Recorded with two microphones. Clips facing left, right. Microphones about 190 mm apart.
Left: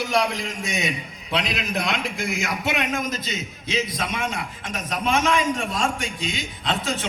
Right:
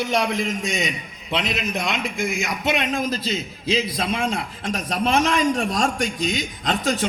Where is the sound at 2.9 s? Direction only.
30° right (ahead or behind).